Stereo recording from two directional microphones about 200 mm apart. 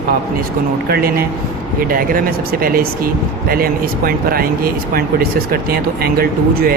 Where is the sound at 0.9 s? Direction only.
50° right (ahead or behind).